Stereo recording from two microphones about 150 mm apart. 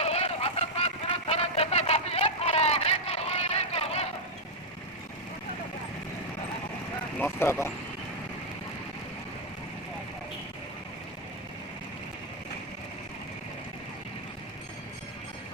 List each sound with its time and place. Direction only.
0.0 s vehicle: 45° left (ahead or behind)
7.2 s speech: 15° left (ahead or behind)